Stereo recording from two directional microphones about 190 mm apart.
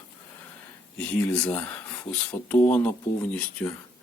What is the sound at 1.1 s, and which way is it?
Speech, 5° left (ahead or behind).